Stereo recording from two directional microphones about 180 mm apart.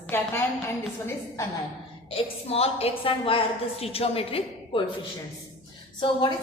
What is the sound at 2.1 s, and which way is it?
A woman's voice, 35° left (ahead or behind).